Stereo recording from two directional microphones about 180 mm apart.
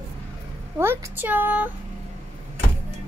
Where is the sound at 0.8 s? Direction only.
15° right (ahead or behind).